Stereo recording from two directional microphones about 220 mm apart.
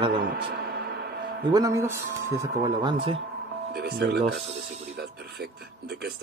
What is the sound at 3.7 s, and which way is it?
Speech, 45° right (ahead or behind).